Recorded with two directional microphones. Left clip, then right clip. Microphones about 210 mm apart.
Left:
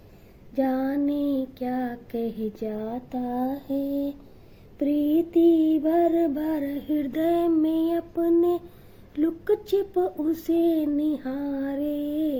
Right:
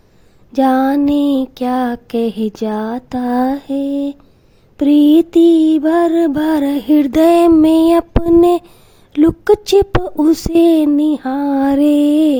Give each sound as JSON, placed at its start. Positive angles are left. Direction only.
{"t": 0.5, "sound": "mantra", "side_deg": -50}